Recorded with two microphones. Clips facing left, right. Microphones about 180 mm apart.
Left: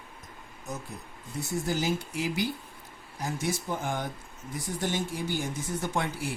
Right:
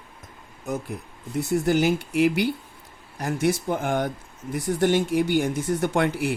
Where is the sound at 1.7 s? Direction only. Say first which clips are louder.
Right 7 dB; 65° right (ahead or behind).